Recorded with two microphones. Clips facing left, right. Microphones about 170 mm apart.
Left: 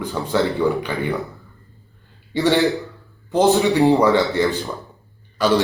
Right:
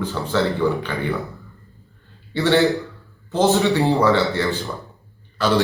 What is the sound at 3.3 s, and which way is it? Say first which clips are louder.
A man's voice: left 2 dB; 15° left (ahead or behind).